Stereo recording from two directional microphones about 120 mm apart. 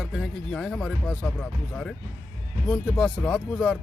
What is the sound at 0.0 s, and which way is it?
Speech, 5° left (ahead or behind).